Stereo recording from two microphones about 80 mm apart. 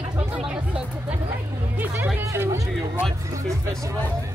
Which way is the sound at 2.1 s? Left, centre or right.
Right.